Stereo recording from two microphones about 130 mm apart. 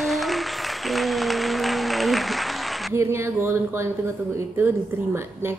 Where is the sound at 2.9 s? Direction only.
20° right (ahead or behind).